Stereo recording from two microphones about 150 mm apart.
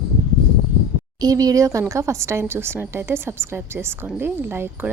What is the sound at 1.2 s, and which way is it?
A woman's voice, 25° right (ahead or behind).